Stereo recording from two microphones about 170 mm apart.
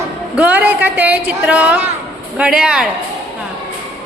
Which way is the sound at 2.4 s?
5° right (ahead or behind).